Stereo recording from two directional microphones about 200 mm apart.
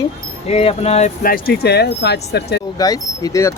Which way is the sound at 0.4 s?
30° left (ahead or behind).